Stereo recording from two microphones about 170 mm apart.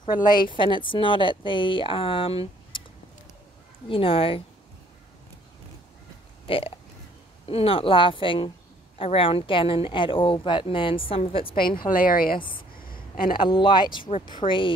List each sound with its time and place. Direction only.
0.0 s speech: 25° left (ahead or behind)
3.9 s speech: 30° left (ahead or behind)
6.4 s speech: 30° left (ahead or behind)
11.9 s a woman's voice: 55° left (ahead or behind)
12.4 s speech: 30° left (ahead or behind)
12.7 s a sound: 55° left (ahead or behind)
13.4 s speech: 30° left (ahead or behind)